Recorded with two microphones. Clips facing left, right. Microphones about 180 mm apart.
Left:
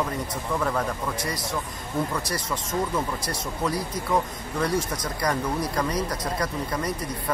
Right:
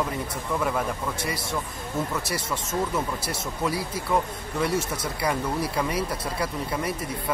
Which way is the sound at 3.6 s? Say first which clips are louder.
Even; 5° right (ahead or behind).